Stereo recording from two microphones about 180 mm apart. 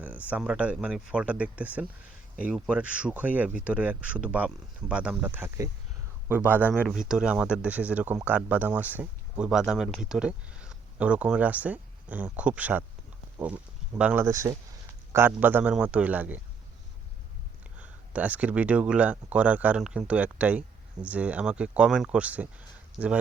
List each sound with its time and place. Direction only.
0.0 s speech: 10° right (ahead or behind)
14.0 s speech: 5° right (ahead or behind)
14.3 s speech: 15° right (ahead or behind)
17.7 s speech: 10° right (ahead or behind)